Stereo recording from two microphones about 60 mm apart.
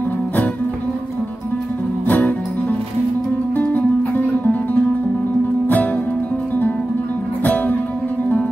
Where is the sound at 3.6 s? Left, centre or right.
Left.